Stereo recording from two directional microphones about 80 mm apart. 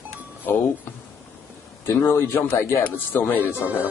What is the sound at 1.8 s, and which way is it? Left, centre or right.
A man's voice, left.